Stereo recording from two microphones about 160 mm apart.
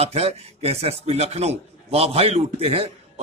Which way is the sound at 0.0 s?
40° right (ahead or behind).